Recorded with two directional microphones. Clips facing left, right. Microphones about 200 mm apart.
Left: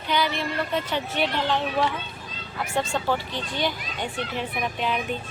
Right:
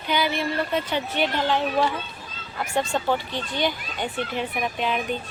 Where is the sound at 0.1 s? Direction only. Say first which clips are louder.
Right 1 dB; 5° right (ahead or behind).